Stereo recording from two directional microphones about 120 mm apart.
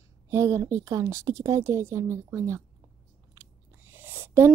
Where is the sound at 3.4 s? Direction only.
20° right (ahead or behind).